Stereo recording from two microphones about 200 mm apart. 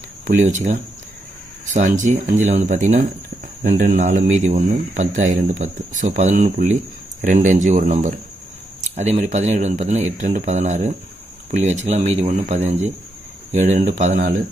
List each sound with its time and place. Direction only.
0.3 s speech: 40° right (ahead or behind)